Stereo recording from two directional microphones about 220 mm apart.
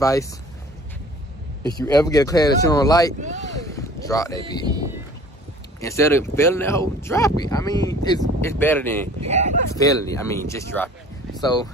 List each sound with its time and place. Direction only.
0.0 s speech: 15° left (ahead or behind)
1.8 s speech: 15° left (ahead or behind)
3.2 s speech: 35° right (ahead or behind)
3.5 s a sound: 15° left (ahead or behind)
4.6 s speech: 15° right (ahead or behind)
5.8 s speech: 15° left (ahead or behind)
9.3 s speech: 30° right (ahead or behind)
9.8 s speech: 15° left (ahead or behind)